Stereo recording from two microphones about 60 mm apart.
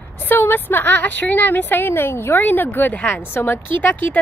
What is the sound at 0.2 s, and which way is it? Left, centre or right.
A woman's voice, left.